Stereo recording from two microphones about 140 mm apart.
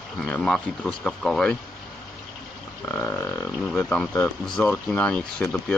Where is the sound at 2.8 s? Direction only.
15° left (ahead or behind).